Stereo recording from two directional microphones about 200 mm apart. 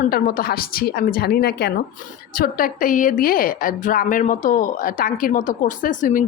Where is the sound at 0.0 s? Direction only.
45° left (ahead or behind).